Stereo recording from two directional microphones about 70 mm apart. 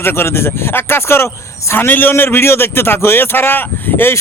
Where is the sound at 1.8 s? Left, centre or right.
Left.